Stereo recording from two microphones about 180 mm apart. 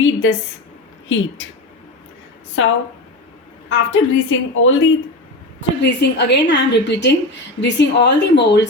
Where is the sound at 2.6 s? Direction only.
90° left.